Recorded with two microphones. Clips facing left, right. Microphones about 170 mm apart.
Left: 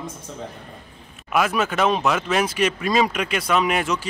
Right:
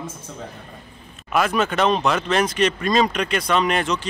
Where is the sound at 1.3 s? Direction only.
5° left (ahead or behind).